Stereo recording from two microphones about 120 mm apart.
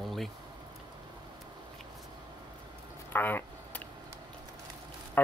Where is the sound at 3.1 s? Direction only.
15° left (ahead or behind).